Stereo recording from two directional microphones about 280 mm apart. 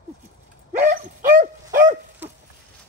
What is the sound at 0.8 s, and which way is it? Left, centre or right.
Dog, right.